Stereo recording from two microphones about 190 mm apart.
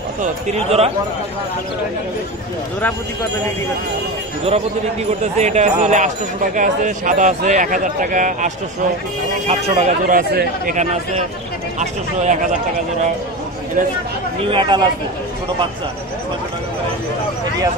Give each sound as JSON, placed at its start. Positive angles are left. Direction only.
{"t": 0.5, "sound": "speech", "side_deg": -35}
{"t": 5.2, "sound": "speech", "side_deg": -35}
{"t": 9.5, "sound": "speech", "side_deg": -35}
{"t": 14.4, "sound": "speech", "side_deg": -25}